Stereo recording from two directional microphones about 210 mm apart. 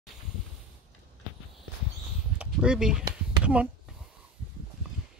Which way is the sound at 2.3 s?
5° right (ahead or behind).